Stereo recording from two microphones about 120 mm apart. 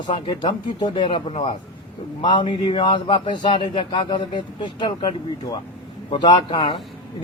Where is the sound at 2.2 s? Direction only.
40° left (ahead or behind).